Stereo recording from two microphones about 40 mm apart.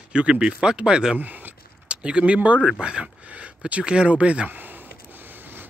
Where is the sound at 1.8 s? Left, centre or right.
Right.